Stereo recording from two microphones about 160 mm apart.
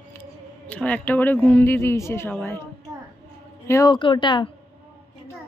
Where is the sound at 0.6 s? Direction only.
10° left (ahead or behind).